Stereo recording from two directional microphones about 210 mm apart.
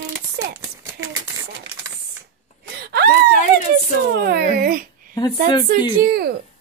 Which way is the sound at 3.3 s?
35° left (ahead or behind).